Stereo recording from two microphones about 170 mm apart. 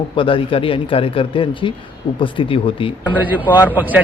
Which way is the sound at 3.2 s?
10° right (ahead or behind).